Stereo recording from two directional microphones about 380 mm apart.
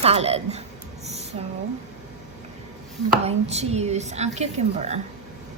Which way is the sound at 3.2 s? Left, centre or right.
Centre.